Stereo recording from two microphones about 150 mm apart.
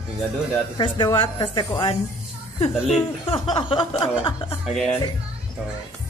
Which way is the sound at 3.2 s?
40° left (ahead or behind).